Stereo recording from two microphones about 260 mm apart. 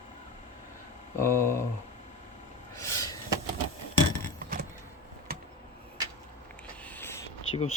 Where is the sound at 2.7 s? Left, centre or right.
Centre.